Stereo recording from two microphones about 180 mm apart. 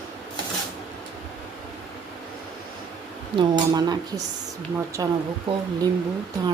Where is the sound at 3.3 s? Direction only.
25° right (ahead or behind).